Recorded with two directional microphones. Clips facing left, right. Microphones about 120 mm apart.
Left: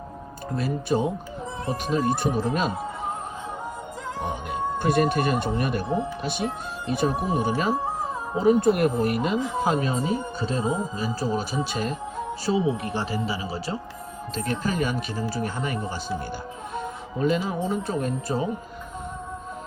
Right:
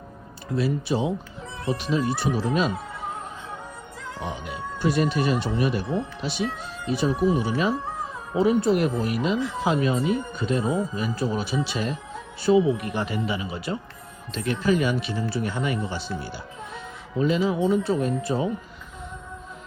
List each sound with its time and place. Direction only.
0.5 s speech: 50° left (ahead or behind)
4.2 s speech: 50° left (ahead or behind)
12.5 s speech: 30° left (ahead or behind)